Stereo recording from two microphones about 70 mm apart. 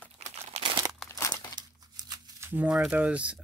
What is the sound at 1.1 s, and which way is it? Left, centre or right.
Crumpling, left.